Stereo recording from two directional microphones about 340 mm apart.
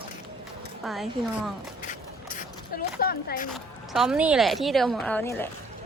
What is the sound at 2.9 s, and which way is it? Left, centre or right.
Speech, left.